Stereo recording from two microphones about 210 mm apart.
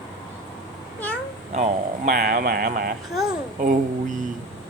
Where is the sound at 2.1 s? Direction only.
45° right (ahead or behind).